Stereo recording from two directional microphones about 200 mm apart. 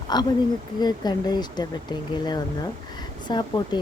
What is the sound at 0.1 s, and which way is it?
Speech, 20° left (ahead or behind).